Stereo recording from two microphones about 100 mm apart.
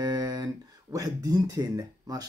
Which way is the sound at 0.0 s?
40° right (ahead or behind).